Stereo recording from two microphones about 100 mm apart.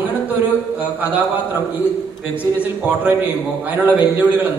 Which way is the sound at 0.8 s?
15° right (ahead or behind).